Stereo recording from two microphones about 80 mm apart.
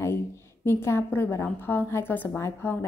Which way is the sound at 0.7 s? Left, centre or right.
Left.